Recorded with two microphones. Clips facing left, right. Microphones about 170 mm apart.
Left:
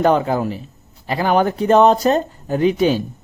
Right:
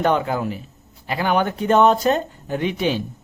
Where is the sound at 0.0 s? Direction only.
35° left (ahead or behind).